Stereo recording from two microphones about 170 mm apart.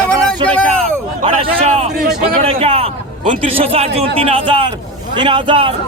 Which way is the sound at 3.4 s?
35° right (ahead or behind).